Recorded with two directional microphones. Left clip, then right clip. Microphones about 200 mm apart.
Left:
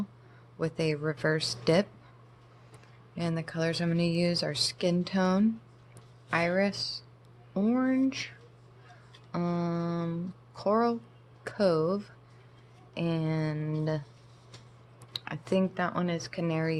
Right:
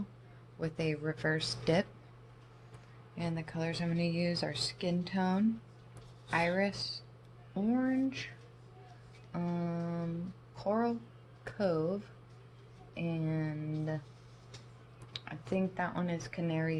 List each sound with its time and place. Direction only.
0.6 s speech: 30° left (ahead or behind)
3.2 s speech: 45° left (ahead or behind)
9.3 s speech: 35° left (ahead or behind)
15.2 s speech: 35° left (ahead or behind)